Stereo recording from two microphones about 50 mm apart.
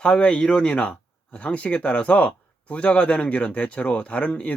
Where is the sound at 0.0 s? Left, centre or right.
Centre.